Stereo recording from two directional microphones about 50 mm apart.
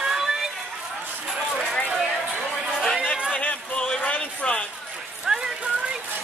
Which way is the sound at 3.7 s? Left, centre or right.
Left.